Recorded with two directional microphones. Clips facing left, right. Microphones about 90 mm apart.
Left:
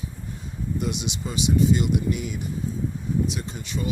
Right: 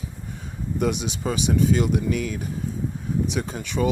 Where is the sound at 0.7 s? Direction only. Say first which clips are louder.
Right 5 dB; 50° right (ahead or behind).